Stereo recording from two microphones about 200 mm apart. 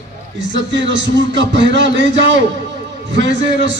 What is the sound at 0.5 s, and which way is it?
A man's voice, 65° right (ahead or behind).